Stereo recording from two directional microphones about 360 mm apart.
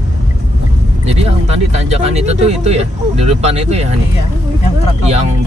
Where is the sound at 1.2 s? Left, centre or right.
Centre.